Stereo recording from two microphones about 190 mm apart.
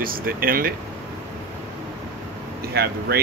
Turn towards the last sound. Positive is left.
turn(degrees=-55)  # may be behind; listen again after turning